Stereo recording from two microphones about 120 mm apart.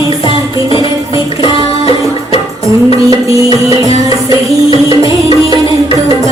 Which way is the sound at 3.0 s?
25° right (ahead or behind).